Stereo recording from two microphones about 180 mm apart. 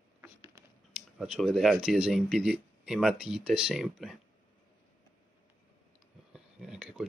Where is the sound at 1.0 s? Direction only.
Centre (ahead or behind).